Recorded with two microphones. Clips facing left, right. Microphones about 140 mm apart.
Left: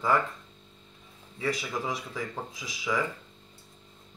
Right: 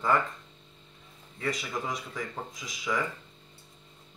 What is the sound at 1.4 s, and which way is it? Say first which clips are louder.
Speech: left 2 dB; 5° left (ahead or behind).